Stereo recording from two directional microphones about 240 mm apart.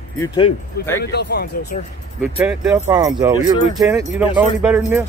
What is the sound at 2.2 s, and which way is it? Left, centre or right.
Speech, centre.